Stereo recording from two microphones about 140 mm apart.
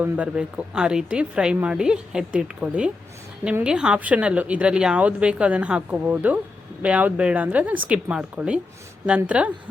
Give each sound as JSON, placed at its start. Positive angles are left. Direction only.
{"t": 0.0, "sound": "speech", "side_deg": -10}